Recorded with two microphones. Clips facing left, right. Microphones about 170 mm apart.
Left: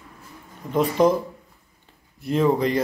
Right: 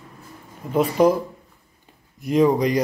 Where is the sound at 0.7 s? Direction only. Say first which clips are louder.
Right 1 dB; 10° right (ahead or behind).